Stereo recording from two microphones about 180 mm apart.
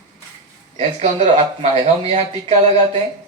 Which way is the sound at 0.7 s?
35° right (ahead or behind).